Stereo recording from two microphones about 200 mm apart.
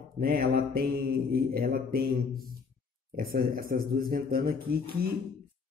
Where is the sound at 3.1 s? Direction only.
45° right (ahead or behind).